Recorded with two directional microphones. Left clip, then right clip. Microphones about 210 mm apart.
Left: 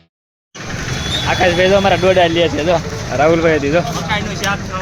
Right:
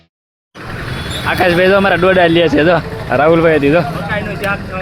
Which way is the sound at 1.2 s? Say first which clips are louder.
Right 2 dB; 15° right (ahead or behind).